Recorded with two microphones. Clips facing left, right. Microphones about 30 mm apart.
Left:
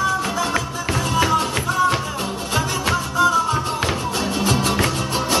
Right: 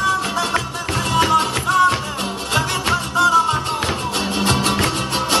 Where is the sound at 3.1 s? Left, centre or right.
Right.